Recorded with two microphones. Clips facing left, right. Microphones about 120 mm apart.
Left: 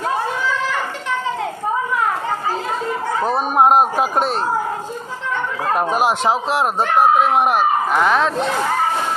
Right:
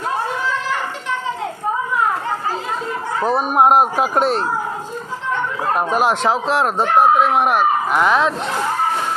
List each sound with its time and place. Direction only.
3.5 s speech: 25° left (ahead or behind)
6.1 s speech: 10° left (ahead or behind)
7.9 s speech: 40° left (ahead or behind)